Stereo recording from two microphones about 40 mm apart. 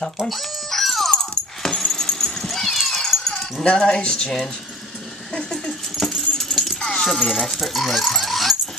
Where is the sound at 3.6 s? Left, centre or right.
Left.